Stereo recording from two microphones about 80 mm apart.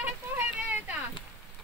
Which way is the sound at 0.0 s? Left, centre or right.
Right.